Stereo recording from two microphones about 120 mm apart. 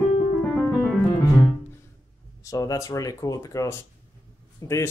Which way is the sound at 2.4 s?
30° left (ahead or behind).